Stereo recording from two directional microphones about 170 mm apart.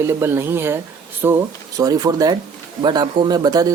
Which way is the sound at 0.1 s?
15° right (ahead or behind).